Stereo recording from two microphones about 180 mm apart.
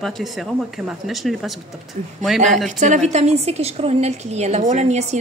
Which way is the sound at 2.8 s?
40° right (ahead or behind).